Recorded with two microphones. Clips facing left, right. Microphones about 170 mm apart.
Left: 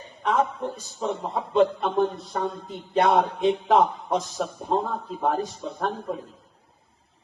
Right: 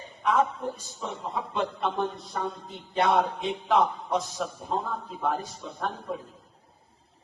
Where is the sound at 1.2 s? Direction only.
50° left (ahead or behind).